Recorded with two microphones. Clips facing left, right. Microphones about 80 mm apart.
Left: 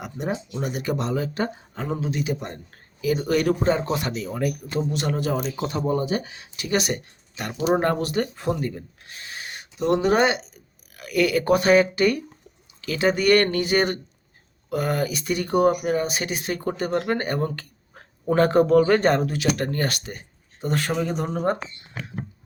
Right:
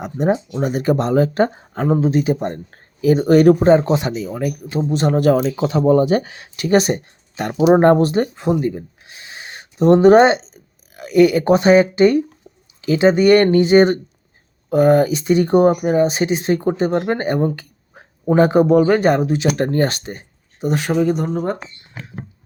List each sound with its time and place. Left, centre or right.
0.0 s speech: right
3.9 s speech: centre
4.9 s speech: right
5.2 s speech: right
5.9 s speech: right
6.7 s speech: right
8.6 s speech: centre
20.6 s speech: centre
21.1 s speech: centre